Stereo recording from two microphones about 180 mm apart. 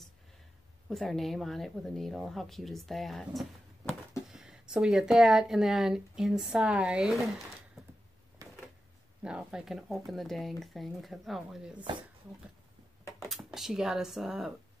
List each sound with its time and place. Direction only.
0.8 s speech: centre (ahead or behind)
8.4 s a sound: 20° right (ahead or behind)
9.2 s speech: 5° right (ahead or behind)
13.3 s speech: 5° right (ahead or behind)